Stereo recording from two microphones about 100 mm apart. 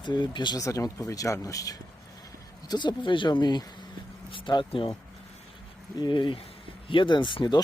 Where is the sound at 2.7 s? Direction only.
50° left (ahead or behind).